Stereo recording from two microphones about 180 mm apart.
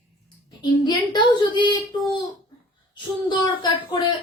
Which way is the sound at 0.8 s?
25° left (ahead or behind).